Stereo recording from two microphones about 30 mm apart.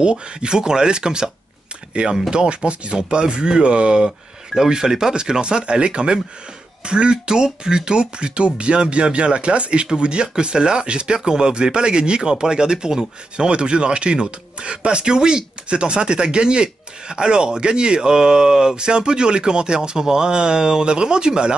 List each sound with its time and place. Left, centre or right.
0.0 s speech: right
4.6 s speech: right
13.5 s speech: right